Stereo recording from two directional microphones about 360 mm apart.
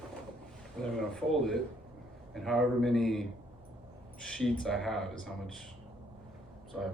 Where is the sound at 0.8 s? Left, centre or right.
Centre.